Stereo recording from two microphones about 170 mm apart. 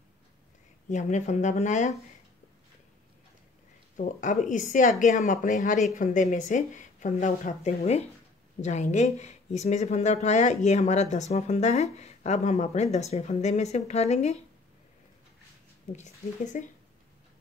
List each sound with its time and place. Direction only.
0.8 s speech: 45° left (ahead or behind)
3.9 s speech: 45° left (ahead or behind)
15.9 s speech: 45° left (ahead or behind)